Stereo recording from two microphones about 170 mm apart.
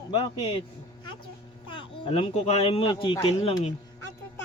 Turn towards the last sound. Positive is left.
turn(degrees=30)  # may be behind; listen again after turning